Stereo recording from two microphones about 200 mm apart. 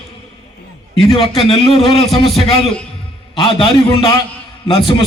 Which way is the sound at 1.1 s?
30° left (ahead or behind).